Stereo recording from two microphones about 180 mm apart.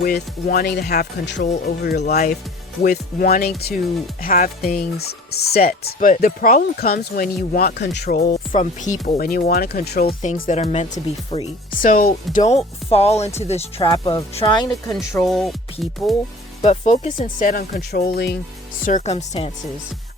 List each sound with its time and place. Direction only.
0.0 s speech: 60° left (ahead or behind)
1.6 s speech: 65° left (ahead or behind)
2.0 s speech: 40° left (ahead or behind)
2.8 s speech: 55° left (ahead or behind)
4.9 s speech: 60° left (ahead or behind)
8.3 s speech: 45° left (ahead or behind)
11.8 s speech: 50° left (ahead or behind); by 14.7 s 25° left (ahead or behind)
15.2 s speech: centre (ahead or behind)
16.6 s speech: 40° left (ahead or behind)
17.2 s speech: 50° left (ahead or behind)
18.9 s speech: 40° left (ahead or behind)